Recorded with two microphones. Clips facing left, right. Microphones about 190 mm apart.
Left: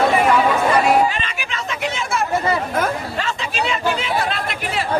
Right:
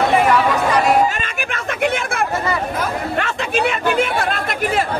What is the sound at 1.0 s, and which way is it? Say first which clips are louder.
Chatter: right 1 dB; 45° right (ahead or behind).